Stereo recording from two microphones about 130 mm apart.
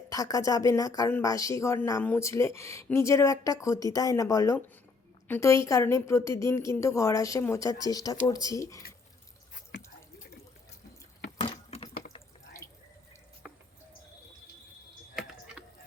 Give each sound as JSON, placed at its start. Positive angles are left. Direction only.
{"t": 0.1, "sound": "speech", "side_deg": 25}
{"t": 11.3, "sound": "water", "side_deg": 55}